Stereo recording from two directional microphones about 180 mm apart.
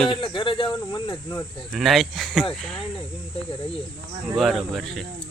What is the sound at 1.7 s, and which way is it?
Speech, centre (ahead or behind).